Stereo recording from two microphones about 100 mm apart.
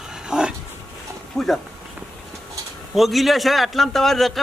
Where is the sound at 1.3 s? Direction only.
Centre (ahead or behind).